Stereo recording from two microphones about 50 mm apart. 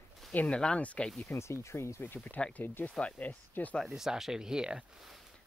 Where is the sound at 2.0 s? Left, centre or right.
Left.